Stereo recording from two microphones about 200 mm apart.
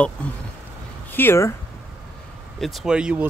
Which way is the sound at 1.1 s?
10° left (ahead or behind).